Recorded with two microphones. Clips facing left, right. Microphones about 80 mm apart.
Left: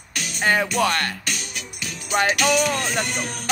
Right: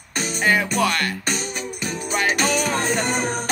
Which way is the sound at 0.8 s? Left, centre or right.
Left.